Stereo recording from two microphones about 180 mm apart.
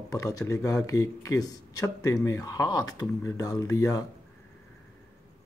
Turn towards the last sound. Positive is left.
turn(degrees=20)  # may be behind; listen again after turning